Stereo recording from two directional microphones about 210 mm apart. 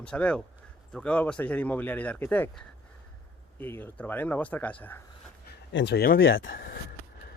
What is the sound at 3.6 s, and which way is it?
Speech, 10° left (ahead or behind).